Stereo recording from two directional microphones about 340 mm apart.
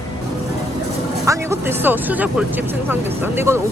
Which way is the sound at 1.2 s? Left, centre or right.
Centre.